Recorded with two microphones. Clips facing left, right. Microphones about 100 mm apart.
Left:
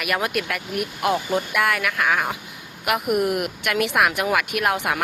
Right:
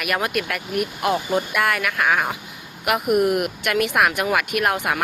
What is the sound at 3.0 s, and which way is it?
Speech, 25° right (ahead or behind).